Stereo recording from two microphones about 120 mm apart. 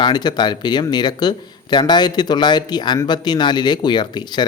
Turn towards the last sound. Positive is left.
turn(degrees=40)  # may be behind; listen again after turning